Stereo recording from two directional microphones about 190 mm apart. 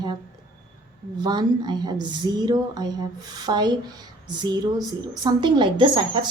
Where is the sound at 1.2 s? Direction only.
20° right (ahead or behind).